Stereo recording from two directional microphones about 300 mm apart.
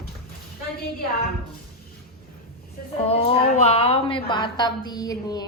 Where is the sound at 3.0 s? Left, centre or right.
Centre.